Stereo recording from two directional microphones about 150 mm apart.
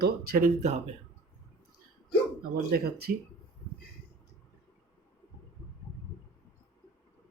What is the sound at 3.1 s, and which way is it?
Speech, 90° right.